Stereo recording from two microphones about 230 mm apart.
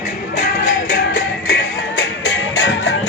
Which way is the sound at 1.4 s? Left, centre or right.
Left.